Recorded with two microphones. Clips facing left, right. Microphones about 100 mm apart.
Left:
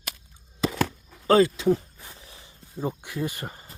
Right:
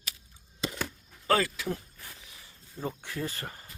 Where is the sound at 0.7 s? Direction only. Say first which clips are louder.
Left 10 dB; 90° left.